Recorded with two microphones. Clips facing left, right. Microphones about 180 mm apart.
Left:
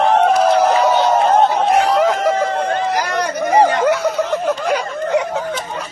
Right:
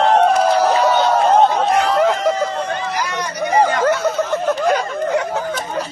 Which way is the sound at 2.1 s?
60° left (ahead or behind).